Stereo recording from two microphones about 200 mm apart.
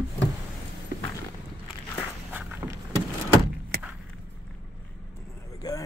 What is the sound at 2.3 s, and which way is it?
Walk, 10° right (ahead or behind).